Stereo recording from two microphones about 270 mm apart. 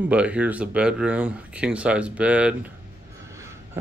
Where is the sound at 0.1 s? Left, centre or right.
Centre.